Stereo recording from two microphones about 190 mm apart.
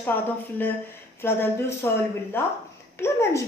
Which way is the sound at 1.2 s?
10° left (ahead or behind).